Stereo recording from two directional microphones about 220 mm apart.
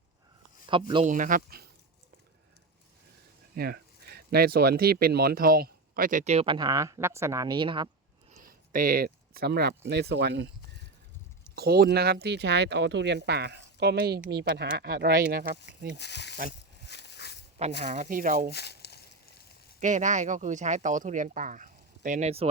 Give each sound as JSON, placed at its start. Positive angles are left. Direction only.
{"t": 1.0, "sound": "speech", "side_deg": -35}
{"t": 3.5, "sound": "speech", "side_deg": -45}
{"t": 8.3, "sound": "speech", "side_deg": -40}
{"t": 11.5, "sound": "speech", "side_deg": -45}
{"t": 16.0, "sound": "speech", "side_deg": 50}
{"t": 16.8, "sound": "a sound", "side_deg": 50}
{"t": 17.8, "sound": "speech", "side_deg": -35}
{"t": 18.5, "sound": "a sound", "side_deg": 50}
{"t": 19.8, "sound": "speech", "side_deg": -35}